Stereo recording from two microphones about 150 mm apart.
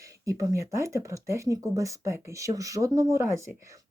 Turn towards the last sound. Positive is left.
turn(degrees=-20)  # may be behind; listen again after turning